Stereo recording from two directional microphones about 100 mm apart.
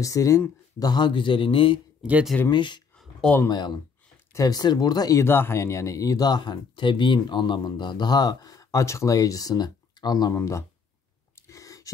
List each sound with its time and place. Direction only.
0.0 s speech: 35° left (ahead or behind)
0.7 s a man's voice: 45° left (ahead or behind); by 1.8 s 60° left (ahead or behind)
2.0 s speech: 10° right (ahead or behind)
2.5 s speech: 50° left (ahead or behind)
5.2 s speech: 25° left (ahead or behind); by 10.3 s 40° left (ahead or behind)
10.3 s speech: 30° left (ahead or behind)
11.3 s a sound: 30° left (ahead or behind)